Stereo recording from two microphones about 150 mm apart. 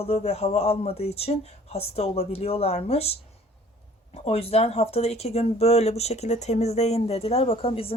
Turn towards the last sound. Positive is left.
turn(degrees=40)  # may be behind; listen again after turning